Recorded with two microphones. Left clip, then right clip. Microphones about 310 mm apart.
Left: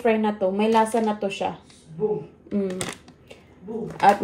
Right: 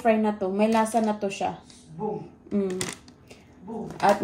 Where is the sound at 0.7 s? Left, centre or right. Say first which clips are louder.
Left 3 dB; left.